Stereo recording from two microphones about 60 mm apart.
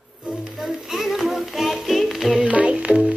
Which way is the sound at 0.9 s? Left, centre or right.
Centre.